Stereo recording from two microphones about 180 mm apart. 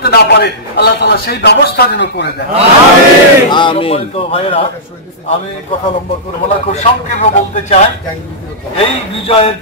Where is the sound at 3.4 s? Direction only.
25° left (ahead or behind).